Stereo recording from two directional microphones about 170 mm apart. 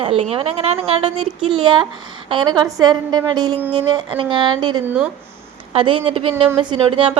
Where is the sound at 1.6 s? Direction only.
25° right (ahead or behind).